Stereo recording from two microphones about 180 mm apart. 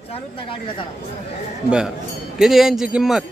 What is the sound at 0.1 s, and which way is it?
Speech, 30° left (ahead or behind).